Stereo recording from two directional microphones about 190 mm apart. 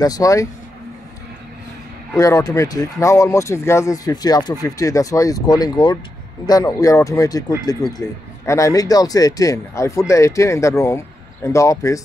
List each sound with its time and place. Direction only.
0.0 s speech: 20° left (ahead or behind)
2.1 s speech: 20° left (ahead or behind)